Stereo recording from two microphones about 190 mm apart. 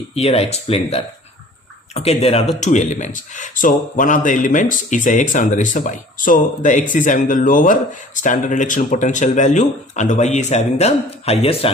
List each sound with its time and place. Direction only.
0.1 s speech: 30° left (ahead or behind)